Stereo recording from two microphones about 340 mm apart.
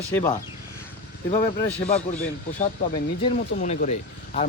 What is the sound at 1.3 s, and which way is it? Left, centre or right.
A man's voice, centre.